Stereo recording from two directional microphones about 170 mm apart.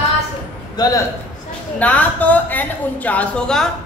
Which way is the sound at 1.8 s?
10° left (ahead or behind).